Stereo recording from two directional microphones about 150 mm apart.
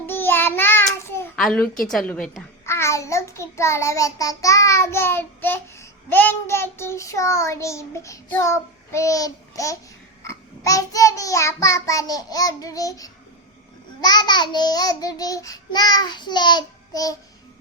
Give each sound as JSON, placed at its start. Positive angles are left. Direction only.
{"t": 0.0, "sound": "child singing", "side_deg": 15}
{"t": 1.4, "sound": "a woman's voice", "side_deg": 5}
{"t": 2.6, "sound": "child singing", "side_deg": 20}
{"t": 10.2, "sound": "babbling", "side_deg": 20}